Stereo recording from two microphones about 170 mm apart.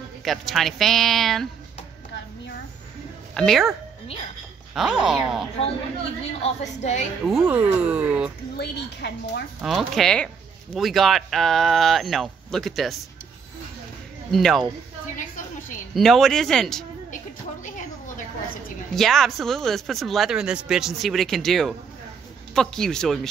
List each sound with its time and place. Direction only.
0.2 s speech: centre (ahead or behind)
3.3 s speech: centre (ahead or behind)
4.7 s speech: centre (ahead or behind)
6.4 s a woman's voice: 45° left (ahead or behind)
7.2 s speech: 5° right (ahead or behind)
8.5 s a woman's voice: 80° left
9.6 s speech: centre (ahead or behind)
14.3 s speech: centre (ahead or behind)
15.1 s a sound: 50° left (ahead or behind)
15.9 s speech: centre (ahead or behind)
17.6 s a sound: 50° left (ahead or behind)
18.9 s speech: centre (ahead or behind)